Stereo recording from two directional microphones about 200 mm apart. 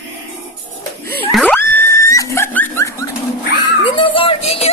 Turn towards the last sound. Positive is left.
turn(degrees=30)  # may be behind; listen again after turning